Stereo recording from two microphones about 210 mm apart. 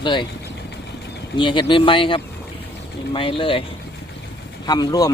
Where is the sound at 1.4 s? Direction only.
25° left (ahead or behind).